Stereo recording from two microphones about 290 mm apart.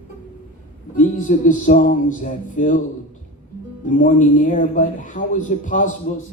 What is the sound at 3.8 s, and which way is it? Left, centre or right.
Speech, left.